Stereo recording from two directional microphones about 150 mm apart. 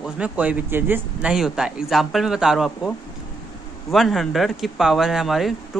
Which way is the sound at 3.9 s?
Centre (ahead or behind).